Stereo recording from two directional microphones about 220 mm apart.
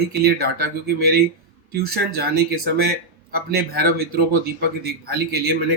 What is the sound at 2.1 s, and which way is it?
Speech, 45° right (ahead or behind).